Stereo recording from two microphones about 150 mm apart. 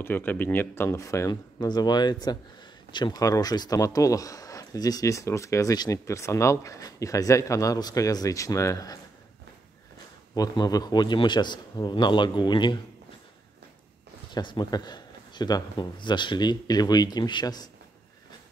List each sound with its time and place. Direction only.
0.0 s speech: 15° left (ahead or behind)
10.3 s speech: 25° left (ahead or behind)
14.3 s speech: 30° left (ahead or behind)